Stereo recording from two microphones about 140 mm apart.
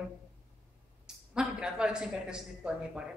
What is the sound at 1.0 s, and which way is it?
A woman's voice, 5° right (ahead or behind).